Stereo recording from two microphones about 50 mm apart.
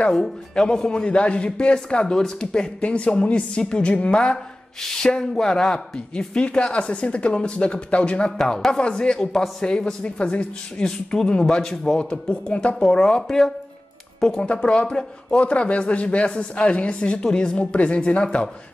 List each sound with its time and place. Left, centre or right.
0.1 s a man's voice: centre
5.9 s a man's voice: left
8.4 s a man's voice: centre